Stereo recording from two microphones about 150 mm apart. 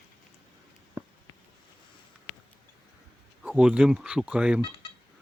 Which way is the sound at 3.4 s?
5° right (ahead or behind).